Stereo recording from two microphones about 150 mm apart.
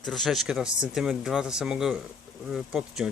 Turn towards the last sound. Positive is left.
turn(degrees=-5)  # may be behind; listen again after turning